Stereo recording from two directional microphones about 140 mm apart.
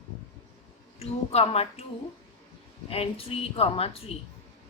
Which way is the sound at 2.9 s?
45° left (ahead or behind).